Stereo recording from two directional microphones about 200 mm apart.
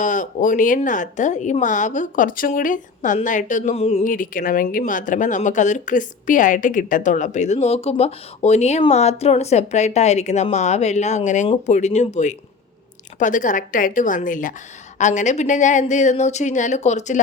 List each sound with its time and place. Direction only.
0.0 s a woman's voice: 40° left (ahead or behind)